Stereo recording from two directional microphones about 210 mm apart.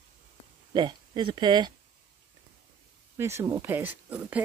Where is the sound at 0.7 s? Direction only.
20° right (ahead or behind).